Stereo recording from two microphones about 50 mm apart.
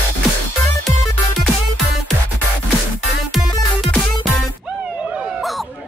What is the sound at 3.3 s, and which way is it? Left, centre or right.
Music, centre.